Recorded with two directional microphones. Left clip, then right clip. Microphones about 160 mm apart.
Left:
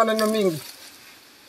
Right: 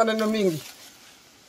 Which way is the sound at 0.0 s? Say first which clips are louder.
Left 2 dB; 30° right (ahead or behind).